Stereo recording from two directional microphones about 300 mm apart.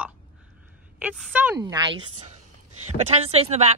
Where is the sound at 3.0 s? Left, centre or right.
Right.